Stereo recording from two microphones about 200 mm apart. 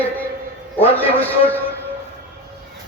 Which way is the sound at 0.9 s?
10° left (ahead or behind).